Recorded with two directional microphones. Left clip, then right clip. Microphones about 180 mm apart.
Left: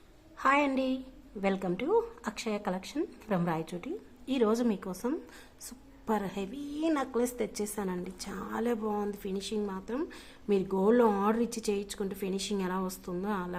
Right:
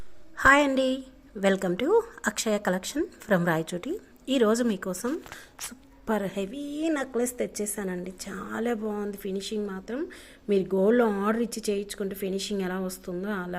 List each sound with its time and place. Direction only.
0.3 s a woman's voice: 20° right (ahead or behind)